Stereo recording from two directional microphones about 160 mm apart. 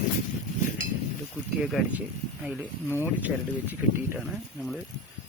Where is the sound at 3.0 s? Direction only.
10° right (ahead or behind).